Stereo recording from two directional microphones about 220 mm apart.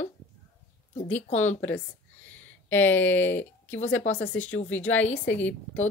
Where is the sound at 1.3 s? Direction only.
30° left (ahead or behind).